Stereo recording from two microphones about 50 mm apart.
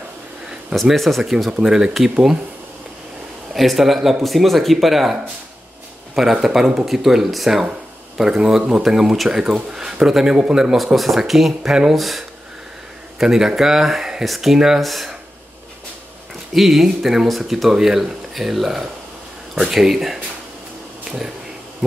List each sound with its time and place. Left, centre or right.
0.9 s speech: centre
3.5 s speech: centre
6.4 s speech: centre
11.0 s speech: centre
16.5 s speech: centre
21.0 s a sound: centre